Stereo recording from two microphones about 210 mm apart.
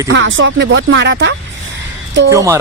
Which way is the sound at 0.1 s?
65° right (ahead or behind).